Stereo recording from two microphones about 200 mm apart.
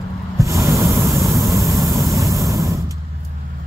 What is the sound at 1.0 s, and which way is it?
Vehicle, 15° right (ahead or behind).